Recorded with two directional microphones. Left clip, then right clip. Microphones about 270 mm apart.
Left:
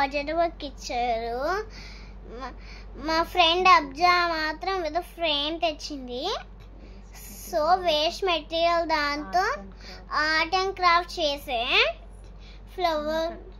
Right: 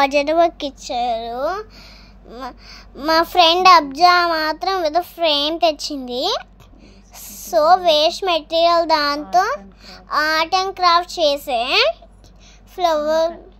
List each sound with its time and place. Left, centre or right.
0.0 s a woman's voice: right
2.3 s child singing: centre